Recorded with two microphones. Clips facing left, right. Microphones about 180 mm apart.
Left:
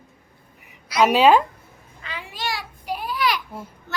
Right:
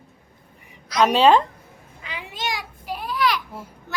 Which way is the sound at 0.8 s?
10° left (ahead or behind).